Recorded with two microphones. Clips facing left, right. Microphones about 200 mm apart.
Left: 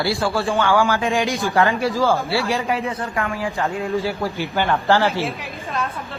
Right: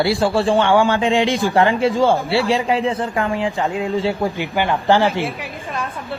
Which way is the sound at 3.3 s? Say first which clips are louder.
Right 3 dB; 15° right (ahead or behind).